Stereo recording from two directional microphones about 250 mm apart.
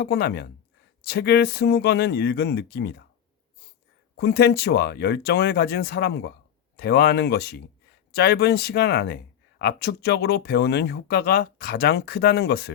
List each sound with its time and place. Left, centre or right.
0.0 s speech: left
4.2 s speech: left